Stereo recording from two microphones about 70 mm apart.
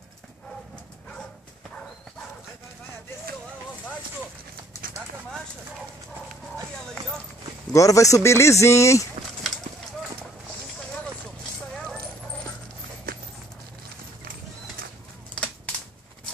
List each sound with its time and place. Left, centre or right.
7.7 s speech: left
15.3 s typewriter: centre